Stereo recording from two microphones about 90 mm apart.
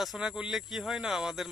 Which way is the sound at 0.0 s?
Centre (ahead or behind).